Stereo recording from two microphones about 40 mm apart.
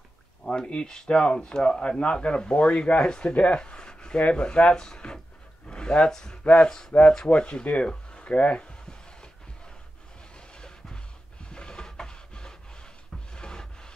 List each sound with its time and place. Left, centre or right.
0.5 s speech: left
6.4 s speech: left
10.5 s music: centre
11.4 s rub: left